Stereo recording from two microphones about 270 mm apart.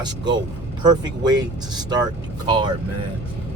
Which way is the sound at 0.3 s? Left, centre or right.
Centre.